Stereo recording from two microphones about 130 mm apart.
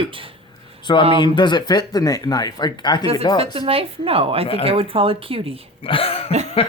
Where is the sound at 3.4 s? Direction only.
45° right (ahead or behind).